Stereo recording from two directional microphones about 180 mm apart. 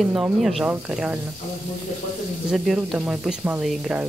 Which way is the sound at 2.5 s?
Centre (ahead or behind).